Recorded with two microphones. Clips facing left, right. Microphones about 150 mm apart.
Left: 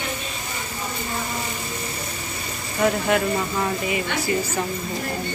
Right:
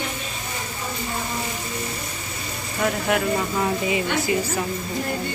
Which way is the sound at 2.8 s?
Centre (ahead or behind).